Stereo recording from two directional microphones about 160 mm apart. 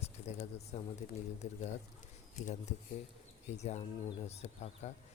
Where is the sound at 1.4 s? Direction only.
45° left (ahead or behind).